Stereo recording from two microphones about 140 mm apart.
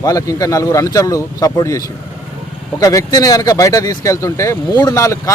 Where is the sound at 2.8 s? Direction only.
25° left (ahead or behind).